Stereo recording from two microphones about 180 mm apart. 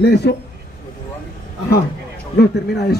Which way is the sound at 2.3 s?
60° left (ahead or behind).